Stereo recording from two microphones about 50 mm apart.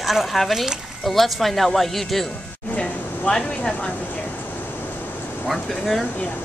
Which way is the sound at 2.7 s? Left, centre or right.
Left.